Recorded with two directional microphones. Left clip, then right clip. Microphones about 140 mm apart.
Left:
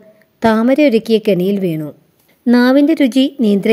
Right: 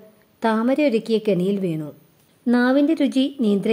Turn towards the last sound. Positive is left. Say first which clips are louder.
# left 7 dB
turn(degrees=30)  # may be behind; listen again after turning